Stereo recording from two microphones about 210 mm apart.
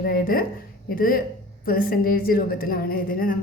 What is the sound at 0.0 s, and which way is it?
A woman's voice, 45° left (ahead or behind).